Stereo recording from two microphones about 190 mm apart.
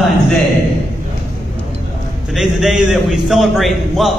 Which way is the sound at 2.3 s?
Centre (ahead or behind).